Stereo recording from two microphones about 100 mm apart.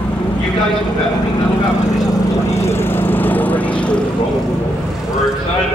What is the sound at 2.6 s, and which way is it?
Lawn mower, 25° left (ahead or behind).